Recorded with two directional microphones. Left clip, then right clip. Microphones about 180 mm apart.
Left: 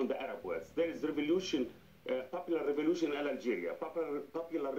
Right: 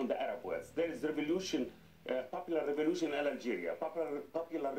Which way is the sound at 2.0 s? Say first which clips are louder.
Left 1 dB; 30° right (ahead or behind).